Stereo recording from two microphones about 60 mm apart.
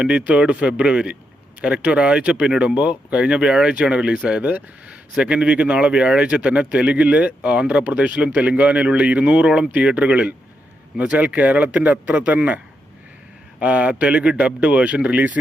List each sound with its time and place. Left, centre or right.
0.2 s speech: right
13.6 s speech: right